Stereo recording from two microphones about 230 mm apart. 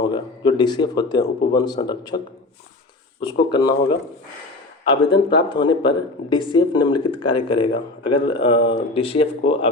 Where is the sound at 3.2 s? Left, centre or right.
Centre.